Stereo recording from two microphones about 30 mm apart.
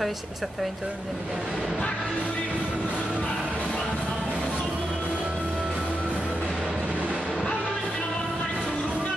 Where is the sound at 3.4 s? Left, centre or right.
Right.